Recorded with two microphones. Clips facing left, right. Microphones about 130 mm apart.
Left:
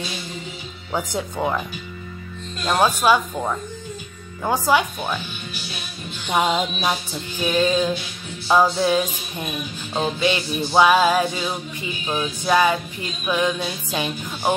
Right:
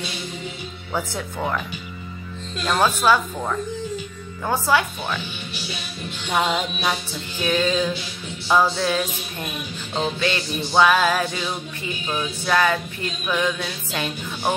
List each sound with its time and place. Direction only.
0.9 s music: 15° left (ahead or behind)
2.6 s music: 15° left (ahead or behind)
6.2 s music: 15° left (ahead or behind)